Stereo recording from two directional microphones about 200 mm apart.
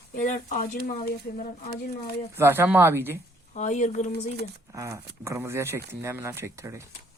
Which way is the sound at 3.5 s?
35° left (ahead or behind).